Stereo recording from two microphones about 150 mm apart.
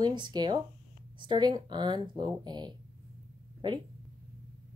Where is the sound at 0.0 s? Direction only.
30° right (ahead or behind).